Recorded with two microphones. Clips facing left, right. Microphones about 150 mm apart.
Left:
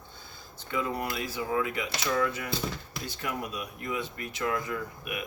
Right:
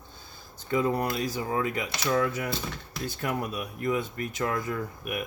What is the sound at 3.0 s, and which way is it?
Speech, 50° right (ahead or behind).